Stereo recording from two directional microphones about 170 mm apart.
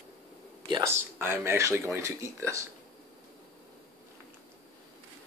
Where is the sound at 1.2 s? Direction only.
15° right (ahead or behind).